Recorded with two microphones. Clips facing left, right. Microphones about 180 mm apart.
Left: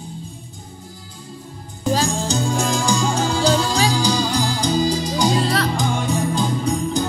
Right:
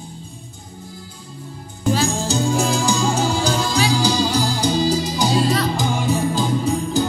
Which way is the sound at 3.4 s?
35° left (ahead or behind).